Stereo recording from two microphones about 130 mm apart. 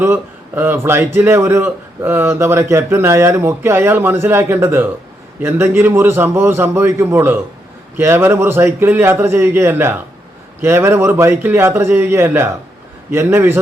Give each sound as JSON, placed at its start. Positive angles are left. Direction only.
{"t": 0.0, "sound": "a man's voice", "side_deg": -15}